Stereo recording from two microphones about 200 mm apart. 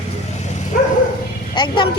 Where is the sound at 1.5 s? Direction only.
20° left (ahead or behind).